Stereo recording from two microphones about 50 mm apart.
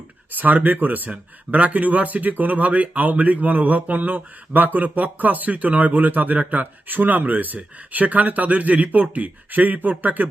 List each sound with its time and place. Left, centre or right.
0.3 s speech: right